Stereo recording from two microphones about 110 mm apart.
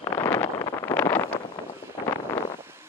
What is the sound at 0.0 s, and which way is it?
Wind noise, 30° left (ahead or behind).